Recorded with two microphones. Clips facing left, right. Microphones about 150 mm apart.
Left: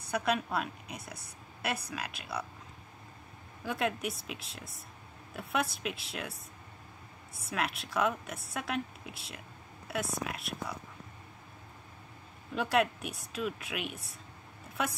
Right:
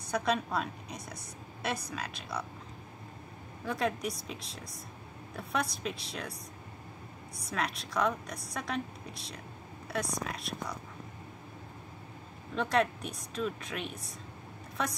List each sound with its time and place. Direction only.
0.1 s a woman's voice: 5° left (ahead or behind)
3.6 s a woman's voice: centre (ahead or behind)
7.4 s a woman's voice: 5° left (ahead or behind)
12.5 s a woman's voice: 5° left (ahead or behind)